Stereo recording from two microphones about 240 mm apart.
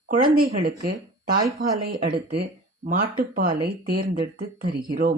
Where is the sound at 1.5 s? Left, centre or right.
Right.